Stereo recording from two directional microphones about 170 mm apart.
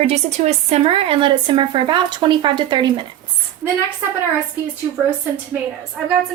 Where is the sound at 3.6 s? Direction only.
10° right (ahead or behind).